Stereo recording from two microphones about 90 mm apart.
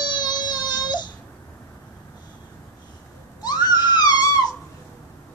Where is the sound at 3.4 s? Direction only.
50° left (ahead or behind).